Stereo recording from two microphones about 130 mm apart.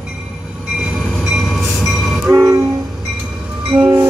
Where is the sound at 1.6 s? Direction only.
15° left (ahead or behind).